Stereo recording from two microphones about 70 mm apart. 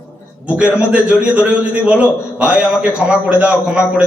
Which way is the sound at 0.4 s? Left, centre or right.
Centre.